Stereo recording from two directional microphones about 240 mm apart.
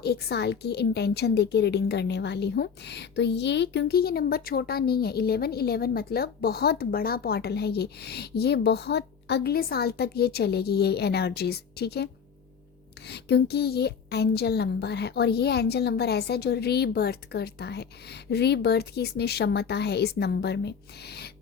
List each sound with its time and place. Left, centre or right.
0.0 s a woman's voice: left
13.1 s a woman's voice: left